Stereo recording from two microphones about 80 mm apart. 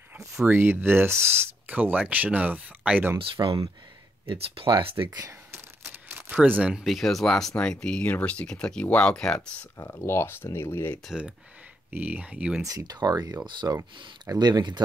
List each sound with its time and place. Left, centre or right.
0.2 s speech: right
1.7 s speech: centre
3.4 s speech: right
4.3 s speech: right
5.5 s a sound: right
6.7 s speech: centre
9.8 s speech: left
11.9 s speech: centre
12.6 s speech: right
13.6 s speech: right
14.4 s speech: right